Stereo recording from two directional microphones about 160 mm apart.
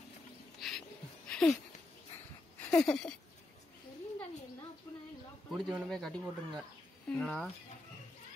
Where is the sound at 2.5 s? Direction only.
5° left (ahead or behind).